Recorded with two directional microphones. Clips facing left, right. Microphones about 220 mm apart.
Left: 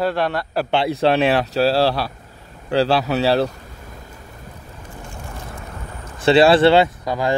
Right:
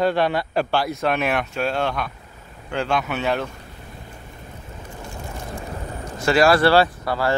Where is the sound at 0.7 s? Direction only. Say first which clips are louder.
Left 5 dB; 25° left (ahead or behind).